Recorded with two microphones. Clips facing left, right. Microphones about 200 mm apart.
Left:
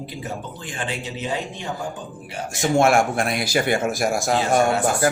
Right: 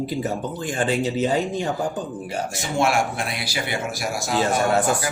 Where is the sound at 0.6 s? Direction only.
40° right (ahead or behind).